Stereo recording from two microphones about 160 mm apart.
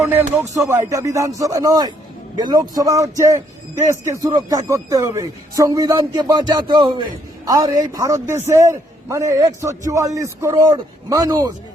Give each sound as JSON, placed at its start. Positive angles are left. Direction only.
{"t": 0.0, "sound": "a man's voice", "side_deg": -15}